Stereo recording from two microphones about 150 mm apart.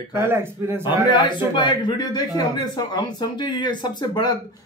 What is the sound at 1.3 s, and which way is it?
Speech, 30° left (ahead or behind).